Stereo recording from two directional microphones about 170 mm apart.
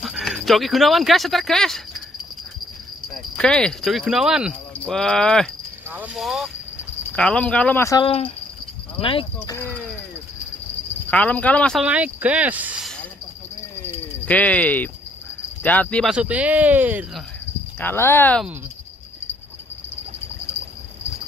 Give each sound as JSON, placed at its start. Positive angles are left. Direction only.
{"t": 0.0, "sound": "speech", "side_deg": 0}
{"t": 3.3, "sound": "speech", "side_deg": 5}
{"t": 5.9, "sound": "speech", "side_deg": -10}
{"t": 8.0, "sound": "speech", "side_deg": 35}
{"t": 11.1, "sound": "speech", "side_deg": 10}
{"t": 11.8, "sound": "speech", "side_deg": -5}
{"t": 14.2, "sound": "speech", "side_deg": 10}
{"t": 16.1, "sound": "speech", "side_deg": -5}
{"t": 17.7, "sound": "speech", "side_deg": 15}